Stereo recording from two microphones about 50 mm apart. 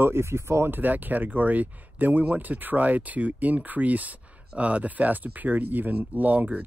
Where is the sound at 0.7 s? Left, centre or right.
Right.